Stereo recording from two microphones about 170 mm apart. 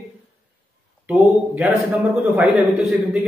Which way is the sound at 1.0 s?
5° right (ahead or behind).